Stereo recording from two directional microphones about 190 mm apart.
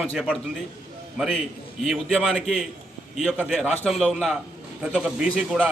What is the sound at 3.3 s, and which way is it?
A man's voice, 5° right (ahead or behind).